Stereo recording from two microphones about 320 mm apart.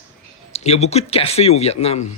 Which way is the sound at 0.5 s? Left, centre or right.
Centre.